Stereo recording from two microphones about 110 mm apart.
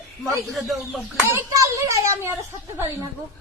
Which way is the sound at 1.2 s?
25° right (ahead or behind).